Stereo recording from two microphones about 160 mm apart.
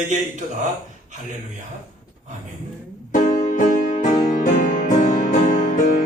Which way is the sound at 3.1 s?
50° left (ahead or behind).